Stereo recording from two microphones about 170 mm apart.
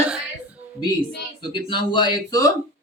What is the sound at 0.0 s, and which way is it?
Music, 5° right (ahead or behind).